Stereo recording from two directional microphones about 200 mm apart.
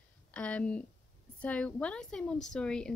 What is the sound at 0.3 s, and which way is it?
A woman's voice, 5° left (ahead or behind).